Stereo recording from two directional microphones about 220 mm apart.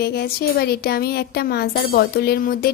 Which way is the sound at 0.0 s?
45° left (ahead or behind).